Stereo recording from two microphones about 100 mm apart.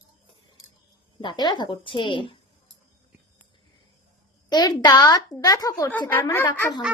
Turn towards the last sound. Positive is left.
turn(degrees=20)  # may be behind; listen again after turning